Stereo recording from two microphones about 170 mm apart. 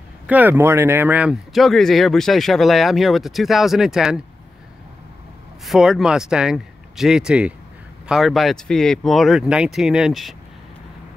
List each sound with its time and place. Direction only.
0.3 s speech: 10° right (ahead or behind)
5.7 s speech: centre (ahead or behind)